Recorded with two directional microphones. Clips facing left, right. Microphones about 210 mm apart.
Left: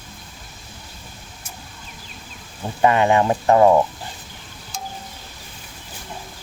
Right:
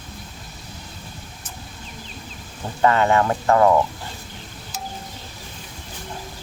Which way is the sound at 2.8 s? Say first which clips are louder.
Left 1 dB; 15° left (ahead or behind).